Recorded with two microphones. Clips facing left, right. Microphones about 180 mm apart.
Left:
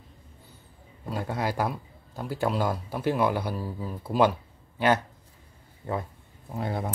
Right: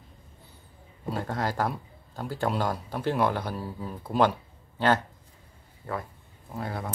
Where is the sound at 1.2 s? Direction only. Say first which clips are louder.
Left 1 dB; 10° left (ahead or behind).